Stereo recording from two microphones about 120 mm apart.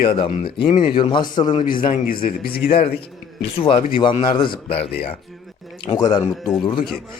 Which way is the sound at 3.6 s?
45° left (ahead or behind).